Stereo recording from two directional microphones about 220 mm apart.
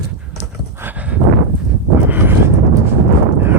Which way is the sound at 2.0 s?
10° right (ahead or behind).